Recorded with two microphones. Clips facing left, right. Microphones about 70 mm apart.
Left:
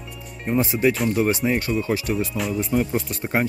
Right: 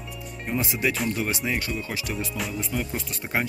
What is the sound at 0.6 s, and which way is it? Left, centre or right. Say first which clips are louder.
Speech: left 7 dB; left.